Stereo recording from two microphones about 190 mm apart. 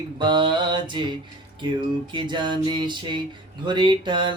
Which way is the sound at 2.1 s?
25° right (ahead or behind).